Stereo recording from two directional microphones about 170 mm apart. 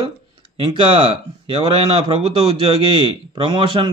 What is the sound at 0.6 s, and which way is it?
Speech, 30° right (ahead or behind).